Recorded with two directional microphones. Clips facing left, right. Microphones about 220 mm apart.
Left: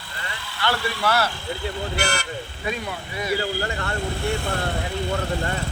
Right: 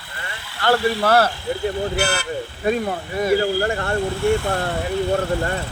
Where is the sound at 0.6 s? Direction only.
50° right (ahead or behind).